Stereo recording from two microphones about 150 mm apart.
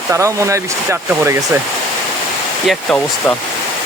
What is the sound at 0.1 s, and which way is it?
Speech, 20° right (ahead or behind).